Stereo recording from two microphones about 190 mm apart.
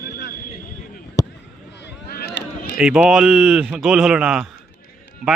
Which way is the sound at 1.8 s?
60° left (ahead or behind).